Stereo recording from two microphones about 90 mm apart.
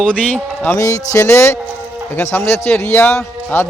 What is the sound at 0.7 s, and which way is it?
A man's voice, 40° left (ahead or behind).